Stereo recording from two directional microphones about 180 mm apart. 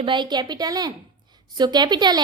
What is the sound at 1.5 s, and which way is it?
Female singing, 25° right (ahead or behind).